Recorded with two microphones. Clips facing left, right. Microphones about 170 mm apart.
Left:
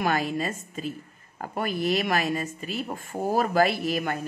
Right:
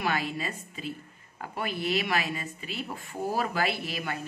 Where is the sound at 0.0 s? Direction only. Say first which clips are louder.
Left 5 dB; 45° left (ahead or behind).